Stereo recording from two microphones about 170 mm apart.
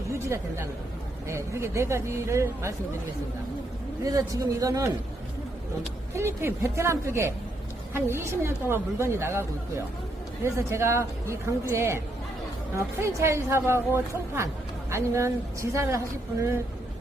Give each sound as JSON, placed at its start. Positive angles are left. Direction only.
{"t": 0.1, "sound": "a woman's voice", "side_deg": -15}
{"t": 4.0, "sound": "a man's voice", "side_deg": -20}
{"t": 6.1, "sound": "a woman's voice", "side_deg": -15}